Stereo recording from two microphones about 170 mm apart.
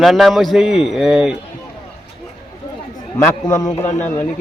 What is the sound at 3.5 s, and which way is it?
Speech, 20° left (ahead or behind).